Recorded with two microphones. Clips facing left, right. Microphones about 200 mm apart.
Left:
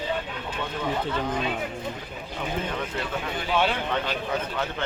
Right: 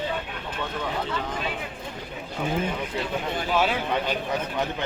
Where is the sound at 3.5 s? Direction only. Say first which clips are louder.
Even; 5° right (ahead or behind).